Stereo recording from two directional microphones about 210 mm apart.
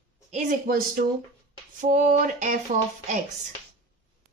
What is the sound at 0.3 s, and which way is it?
A woman's voice, 35° right (ahead or behind).